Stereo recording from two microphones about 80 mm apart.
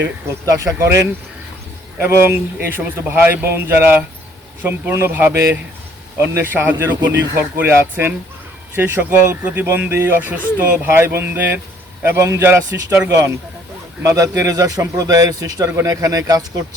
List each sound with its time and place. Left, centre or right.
0.4 s a man's voice: right
10.8 s a man's voice: right
13.1 s speech: right